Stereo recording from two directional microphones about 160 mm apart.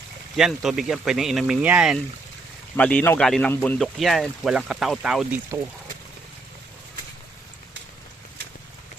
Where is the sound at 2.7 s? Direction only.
10° left (ahead or behind).